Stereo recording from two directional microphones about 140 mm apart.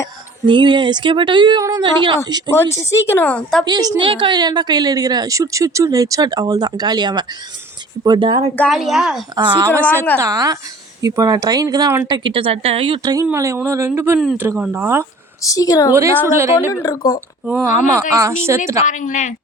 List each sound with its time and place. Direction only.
0.4 s speech: 35° right (ahead or behind)
2.5 s a woman's voice: 20° left (ahead or behind)
3.7 s a woman's voice: 30° right (ahead or behind)
8.7 s speech: centre (ahead or behind)
9.3 s a woman's voice: 30° right (ahead or behind)
13.0 s a woman's voice: 30° right (ahead or behind)
15.4 s a woman's voice: 25° left (ahead or behind)
15.9 s a woman's voice: 20° right (ahead or behind)
16.8 s a woman's voice: 25° left (ahead or behind)
18.1 s a woman's voice: 20° right (ahead or behind)
18.9 s speech: 65° left (ahead or behind)